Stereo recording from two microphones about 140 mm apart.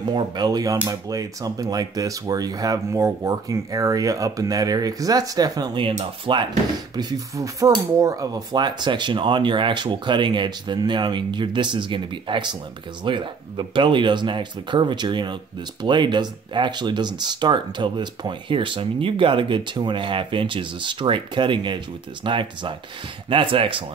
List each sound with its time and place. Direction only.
0.0 s speech: 30° right (ahead or behind)
7.0 s speech: 25° right (ahead or behind)